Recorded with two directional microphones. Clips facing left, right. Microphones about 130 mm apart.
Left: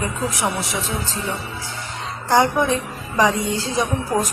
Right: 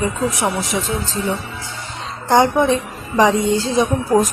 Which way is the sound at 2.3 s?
25° right (ahead or behind).